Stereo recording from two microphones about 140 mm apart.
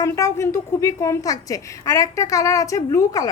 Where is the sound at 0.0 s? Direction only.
20° left (ahead or behind).